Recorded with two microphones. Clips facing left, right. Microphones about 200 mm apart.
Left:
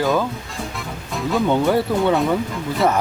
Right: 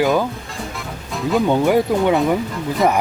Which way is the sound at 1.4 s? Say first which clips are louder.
Right 2 dB; 15° right (ahead or behind).